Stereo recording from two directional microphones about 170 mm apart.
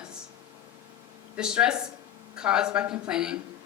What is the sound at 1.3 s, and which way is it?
A woman's voice, 5° right (ahead or behind).